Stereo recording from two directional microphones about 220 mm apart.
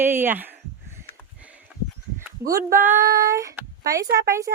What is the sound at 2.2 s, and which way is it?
Speech, 15° right (ahead or behind).